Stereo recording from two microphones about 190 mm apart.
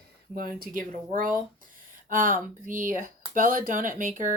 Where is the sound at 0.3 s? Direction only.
50° right (ahead or behind).